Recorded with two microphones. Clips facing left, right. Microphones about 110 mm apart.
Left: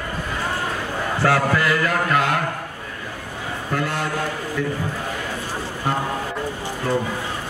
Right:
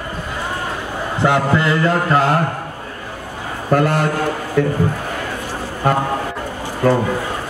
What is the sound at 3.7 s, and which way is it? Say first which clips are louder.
A man's voice: right 9 dB; 50° right (ahead or behind).